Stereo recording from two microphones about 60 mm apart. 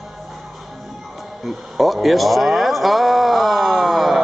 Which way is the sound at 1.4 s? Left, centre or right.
Centre.